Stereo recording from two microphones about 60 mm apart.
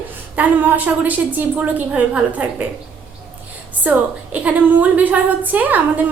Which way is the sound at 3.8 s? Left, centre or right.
Right.